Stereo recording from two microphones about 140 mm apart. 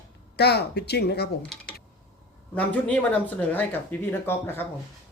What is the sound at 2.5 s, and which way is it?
Speech, 10° left (ahead or behind).